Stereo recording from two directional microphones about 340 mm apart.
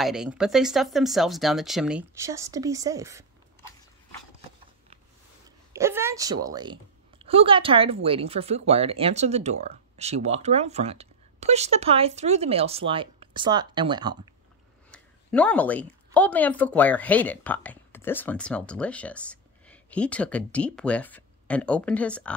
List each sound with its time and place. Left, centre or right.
0.0 s speech: centre
5.7 s a woman's voice: centre
14.9 s a woman's voice: centre